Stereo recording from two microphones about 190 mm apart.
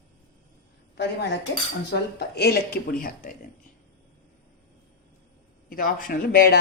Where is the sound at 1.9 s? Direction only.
55° left (ahead or behind).